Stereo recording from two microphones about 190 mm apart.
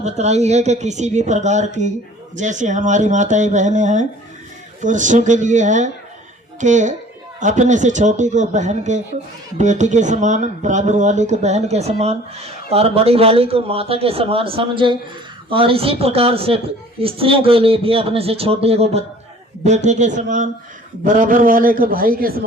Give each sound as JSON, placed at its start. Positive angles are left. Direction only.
{"t": 0.0, "sound": "a man's voice", "side_deg": -35}